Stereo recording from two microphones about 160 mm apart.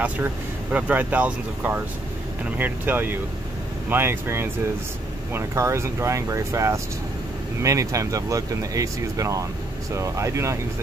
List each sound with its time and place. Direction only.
0.0 s speech: 10° right (ahead or behind)